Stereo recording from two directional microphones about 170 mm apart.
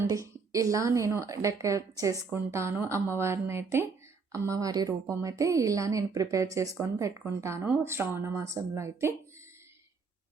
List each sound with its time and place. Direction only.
0.0 s a woman's voice: 20° right (ahead or behind)